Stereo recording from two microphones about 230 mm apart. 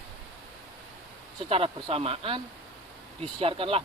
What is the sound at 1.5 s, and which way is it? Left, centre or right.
Speech, right.